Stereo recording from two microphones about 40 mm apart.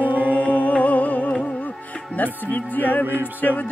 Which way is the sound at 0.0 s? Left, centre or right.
Right.